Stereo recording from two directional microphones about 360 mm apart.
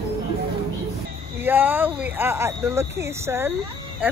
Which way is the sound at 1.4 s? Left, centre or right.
Centre.